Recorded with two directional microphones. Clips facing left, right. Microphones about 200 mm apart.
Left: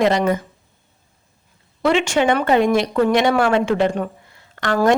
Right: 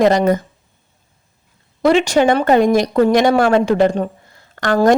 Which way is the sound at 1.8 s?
40° right (ahead or behind).